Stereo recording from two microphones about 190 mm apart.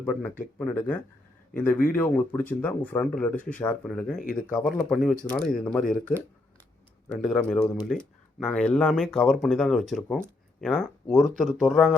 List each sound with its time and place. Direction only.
0.0 s speech: 5° left (ahead or behind)
4.2 s speech: 45° left (ahead or behind)
4.5 s speech: centre (ahead or behind)
7.1 s speech: 5° left (ahead or behind)